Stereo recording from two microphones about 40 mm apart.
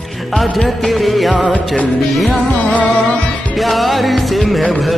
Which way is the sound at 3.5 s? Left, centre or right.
Centre.